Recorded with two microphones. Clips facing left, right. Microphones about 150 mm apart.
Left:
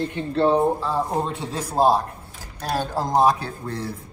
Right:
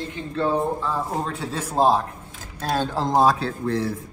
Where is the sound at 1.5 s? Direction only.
10° left (ahead or behind).